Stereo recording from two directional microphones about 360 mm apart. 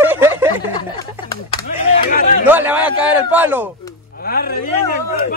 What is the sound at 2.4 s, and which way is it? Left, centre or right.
A man's voice, centre.